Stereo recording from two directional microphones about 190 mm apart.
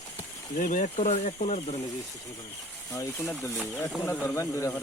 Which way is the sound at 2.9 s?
15° left (ahead or behind).